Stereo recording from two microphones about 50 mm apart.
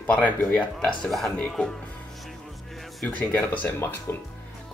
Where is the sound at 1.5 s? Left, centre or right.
Centre.